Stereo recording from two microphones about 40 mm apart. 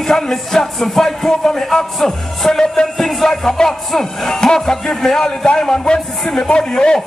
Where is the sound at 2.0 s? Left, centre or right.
Centre.